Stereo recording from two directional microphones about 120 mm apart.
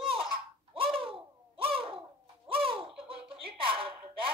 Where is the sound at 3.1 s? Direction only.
50° right (ahead or behind).